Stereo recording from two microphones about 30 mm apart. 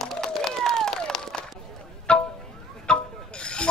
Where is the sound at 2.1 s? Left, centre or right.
Left.